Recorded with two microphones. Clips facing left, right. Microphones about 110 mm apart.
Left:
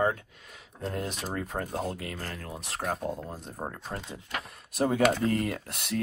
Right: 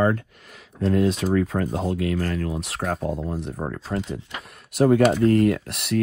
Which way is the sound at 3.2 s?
70° right (ahead or behind).